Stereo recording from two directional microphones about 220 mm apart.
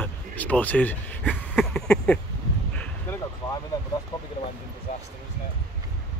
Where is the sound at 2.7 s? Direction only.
5° left (ahead or behind).